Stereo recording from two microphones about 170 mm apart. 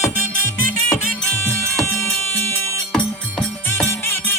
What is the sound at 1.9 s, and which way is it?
Music, 15° left (ahead or behind).